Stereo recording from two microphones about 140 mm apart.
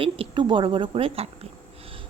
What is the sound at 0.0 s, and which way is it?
A woman's voice, 40° right (ahead or behind).